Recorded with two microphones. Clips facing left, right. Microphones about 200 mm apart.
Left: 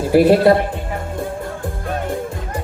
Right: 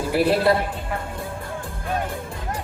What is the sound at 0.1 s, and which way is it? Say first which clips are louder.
Speech: left 8 dB; 45° left (ahead or behind).